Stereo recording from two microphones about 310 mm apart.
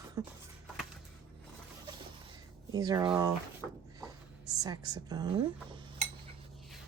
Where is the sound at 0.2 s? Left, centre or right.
Centre.